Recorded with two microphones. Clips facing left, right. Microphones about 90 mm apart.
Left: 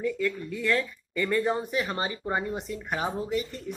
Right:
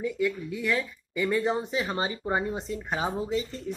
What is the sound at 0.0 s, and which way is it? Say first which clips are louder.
Speech: even; 15° right (ahead or behind).